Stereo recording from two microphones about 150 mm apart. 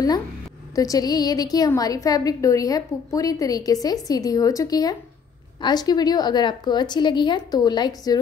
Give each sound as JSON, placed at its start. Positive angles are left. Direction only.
{"t": 0.7, "sound": "a woman's voice", "side_deg": 25}